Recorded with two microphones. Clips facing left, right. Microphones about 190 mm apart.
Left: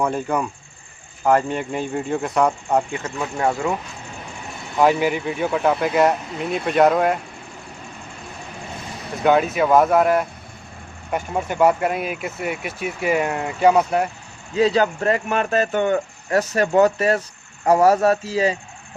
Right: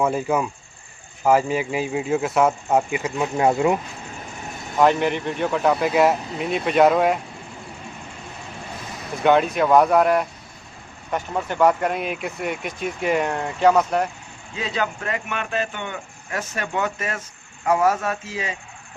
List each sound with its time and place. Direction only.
0.0 s speech: 5° right (ahead or behind); by 3.8 s 20° right (ahead or behind)
4.8 s speech: 5° left (ahead or behind)
9.2 s speech: centre (ahead or behind)
14.5 s speech: 35° left (ahead or behind)